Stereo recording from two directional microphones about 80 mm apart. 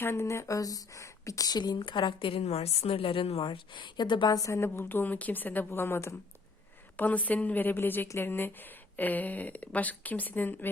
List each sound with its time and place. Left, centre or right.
0.0 s speech: left
1.5 s a woman's voice: left
4.3 s a woman's voice: left
6.9 s a woman's voice: centre